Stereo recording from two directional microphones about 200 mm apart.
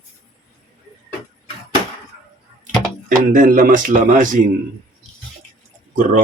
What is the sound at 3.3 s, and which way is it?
A man's voice, 45° right (ahead or behind).